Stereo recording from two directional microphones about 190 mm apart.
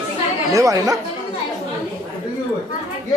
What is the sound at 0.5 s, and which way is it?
Speech, 15° right (ahead or behind).